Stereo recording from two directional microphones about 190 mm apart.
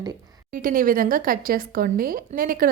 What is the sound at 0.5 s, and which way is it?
Speech, 50° right (ahead or behind).